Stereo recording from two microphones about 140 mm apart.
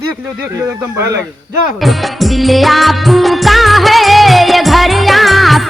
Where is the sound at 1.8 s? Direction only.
Centre (ahead or behind).